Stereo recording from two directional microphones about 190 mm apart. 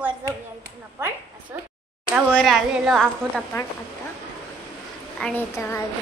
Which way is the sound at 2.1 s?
5° right (ahead or behind).